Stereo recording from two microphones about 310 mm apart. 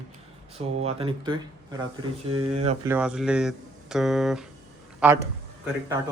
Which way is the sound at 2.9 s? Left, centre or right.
Centre.